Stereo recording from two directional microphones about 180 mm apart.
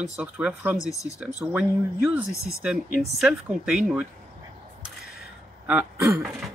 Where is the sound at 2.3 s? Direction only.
15° left (ahead or behind).